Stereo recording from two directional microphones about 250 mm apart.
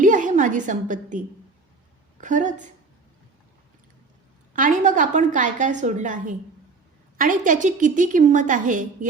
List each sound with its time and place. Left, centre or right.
0.0 s a woman's voice: right
2.2 s speech: right
4.5 s a woman's voice: right